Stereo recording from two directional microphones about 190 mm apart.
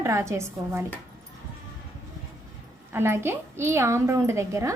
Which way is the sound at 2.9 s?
10° right (ahead or behind).